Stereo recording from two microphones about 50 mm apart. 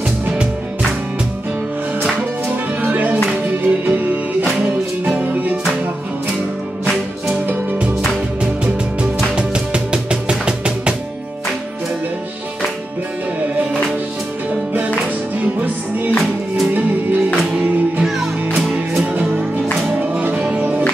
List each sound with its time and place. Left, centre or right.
2.8 s music: right
9.3 s music: centre
15.4 s music: right
18.0 s music: centre
19.9 s music: right